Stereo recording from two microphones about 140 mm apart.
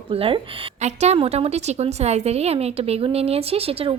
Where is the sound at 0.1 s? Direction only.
40° right (ahead or behind).